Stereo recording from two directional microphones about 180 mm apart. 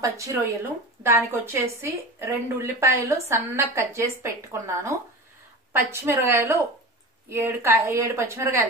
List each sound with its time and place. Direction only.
0.0 s a woman's voice: 15° right (ahead or behind)